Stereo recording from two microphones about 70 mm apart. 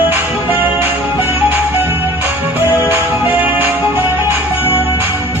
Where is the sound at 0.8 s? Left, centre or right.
Right.